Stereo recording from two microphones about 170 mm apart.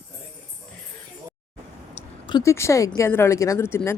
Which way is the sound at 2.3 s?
20° left (ahead or behind).